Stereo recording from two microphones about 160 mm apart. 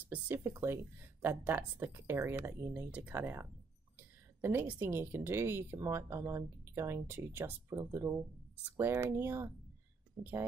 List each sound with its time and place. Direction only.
0.0 s speech: 10° right (ahead or behind)